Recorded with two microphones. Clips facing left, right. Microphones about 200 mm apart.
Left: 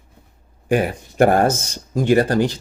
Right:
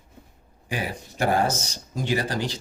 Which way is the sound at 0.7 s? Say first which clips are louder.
Left 12 dB; 55° left (ahead or behind).